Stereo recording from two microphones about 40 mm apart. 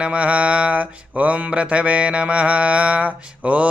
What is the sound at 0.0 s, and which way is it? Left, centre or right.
Mantra, right.